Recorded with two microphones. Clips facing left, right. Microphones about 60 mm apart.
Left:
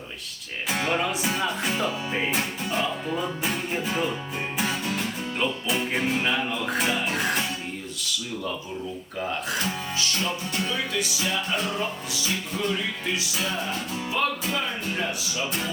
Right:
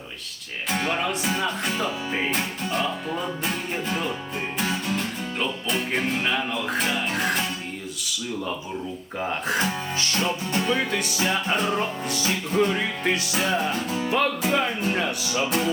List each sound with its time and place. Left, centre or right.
0.7 s music: centre
9.5 s music: right
14.1 s speech: right